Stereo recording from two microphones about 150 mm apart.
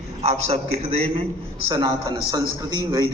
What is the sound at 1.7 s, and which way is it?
A man's voice, 30° right (ahead or behind).